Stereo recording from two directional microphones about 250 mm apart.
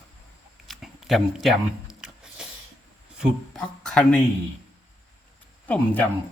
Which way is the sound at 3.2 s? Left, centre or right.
Centre.